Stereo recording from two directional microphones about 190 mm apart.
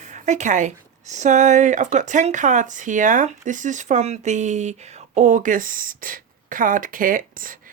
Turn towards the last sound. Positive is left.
turn(degrees=-45)  # may be behind; listen again after turning